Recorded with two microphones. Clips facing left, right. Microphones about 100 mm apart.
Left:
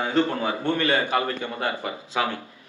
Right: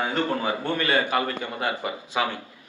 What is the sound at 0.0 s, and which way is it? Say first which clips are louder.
A man's voice: left 2 dB; 20° left (ahead or behind).